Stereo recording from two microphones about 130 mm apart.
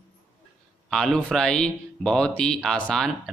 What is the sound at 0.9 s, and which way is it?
Speech, 5° left (ahead or behind).